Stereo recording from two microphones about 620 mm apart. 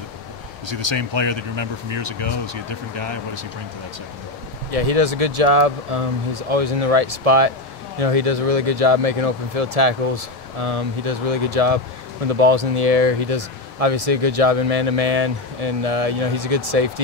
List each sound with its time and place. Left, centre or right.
0.7 s speech: right
4.6 s speech: right